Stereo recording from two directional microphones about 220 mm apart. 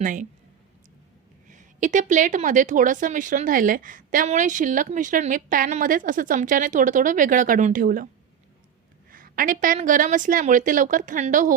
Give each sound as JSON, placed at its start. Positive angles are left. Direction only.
{"t": 0.0, "sound": "a woman's voice", "side_deg": -35}
{"t": 1.5, "sound": "a woman's voice", "side_deg": -35}
{"t": 9.0, "sound": "a woman's voice", "side_deg": -40}